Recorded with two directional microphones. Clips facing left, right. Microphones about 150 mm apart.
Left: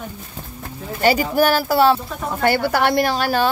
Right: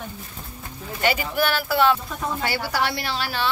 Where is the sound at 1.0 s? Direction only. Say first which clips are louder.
Left 6 dB; 40° left (ahead or behind).